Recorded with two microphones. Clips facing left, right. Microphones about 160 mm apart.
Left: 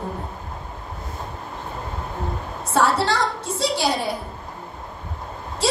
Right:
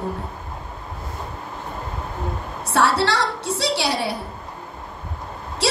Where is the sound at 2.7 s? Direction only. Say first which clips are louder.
Even; 70° right (ahead or behind).